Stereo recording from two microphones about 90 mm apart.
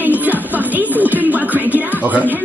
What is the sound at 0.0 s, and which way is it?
Music, 20° right (ahead or behind).